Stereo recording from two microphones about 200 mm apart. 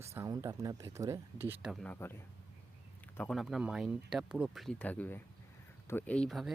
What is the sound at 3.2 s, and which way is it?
Speech, centre (ahead or behind).